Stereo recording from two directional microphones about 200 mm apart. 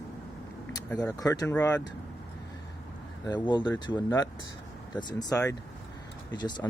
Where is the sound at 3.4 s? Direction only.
20° left (ahead or behind).